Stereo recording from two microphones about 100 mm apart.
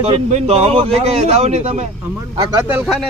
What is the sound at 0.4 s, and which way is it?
Speech, 90° right.